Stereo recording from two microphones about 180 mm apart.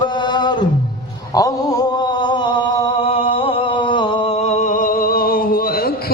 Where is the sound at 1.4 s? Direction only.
20° left (ahead or behind).